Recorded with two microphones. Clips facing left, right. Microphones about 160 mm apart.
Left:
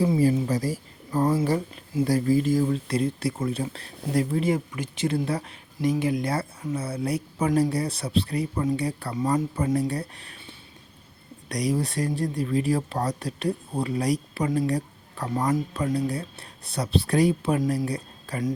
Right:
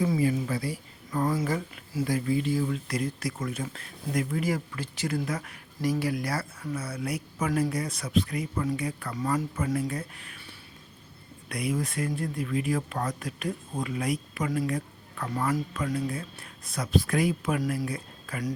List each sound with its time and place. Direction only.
0.0 s speech: 35° left (ahead or behind)
11.4 s speech: 35° left (ahead or behind)
15.8 s speech: 35° left (ahead or behind)